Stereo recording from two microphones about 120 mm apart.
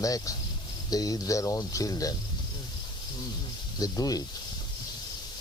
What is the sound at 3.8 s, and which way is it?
Speech, 30° left (ahead or behind).